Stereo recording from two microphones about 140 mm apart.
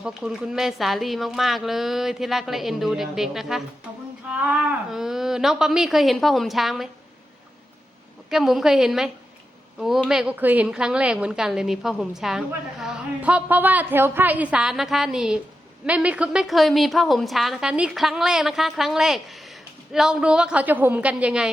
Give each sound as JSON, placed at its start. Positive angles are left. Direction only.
{"t": 0.0, "sound": "a woman's voice", "side_deg": -5}
{"t": 8.3, "sound": "a woman's voice", "side_deg": 0}